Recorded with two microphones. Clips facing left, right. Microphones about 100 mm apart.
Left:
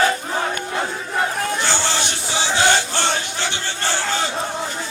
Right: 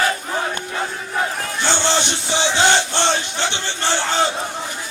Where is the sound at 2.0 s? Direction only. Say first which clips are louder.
Right 3 dB; 20° right (ahead or behind).